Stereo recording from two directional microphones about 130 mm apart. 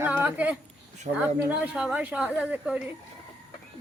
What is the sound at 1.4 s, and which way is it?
A woman's voice, 10° right (ahead or behind).